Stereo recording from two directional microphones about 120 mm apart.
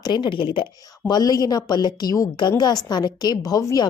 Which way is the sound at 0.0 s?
40° left (ahead or behind).